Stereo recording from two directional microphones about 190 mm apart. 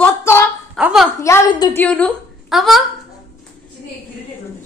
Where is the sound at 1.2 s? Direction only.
20° left (ahead or behind).